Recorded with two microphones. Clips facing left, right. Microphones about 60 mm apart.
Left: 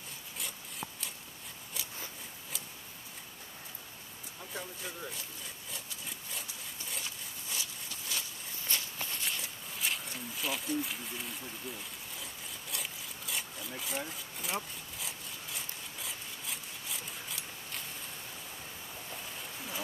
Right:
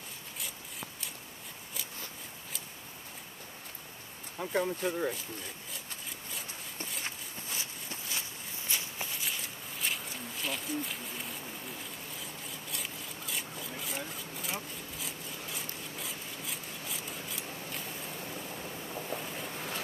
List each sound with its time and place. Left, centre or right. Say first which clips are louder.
4.4 s speech: right 12 dB; right
7.1 s a sound: right 2 dB; right
8.6 s walk: even; centre
12.2 s a sound: right 2 dB; centre
18.2 s vehicle: right 6 dB; right
19.1 s vehicle: right 5 dB; right